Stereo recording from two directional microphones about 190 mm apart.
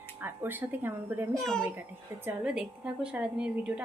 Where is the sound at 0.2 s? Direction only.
10° right (ahead or behind).